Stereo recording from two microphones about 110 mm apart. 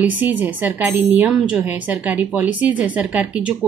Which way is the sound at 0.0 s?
15° right (ahead or behind).